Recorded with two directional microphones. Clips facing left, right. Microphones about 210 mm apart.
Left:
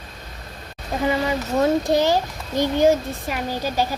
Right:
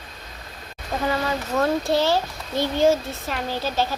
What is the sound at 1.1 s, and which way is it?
A child's voice, 20° left (ahead or behind).